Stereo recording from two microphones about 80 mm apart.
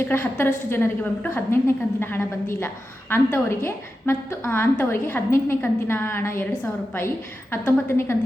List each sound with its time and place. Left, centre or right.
0.0 s a woman's voice: left
7.5 s a woman's voice: left